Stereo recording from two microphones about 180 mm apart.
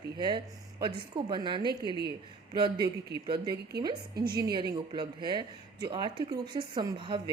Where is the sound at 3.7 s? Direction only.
65° right (ahead or behind).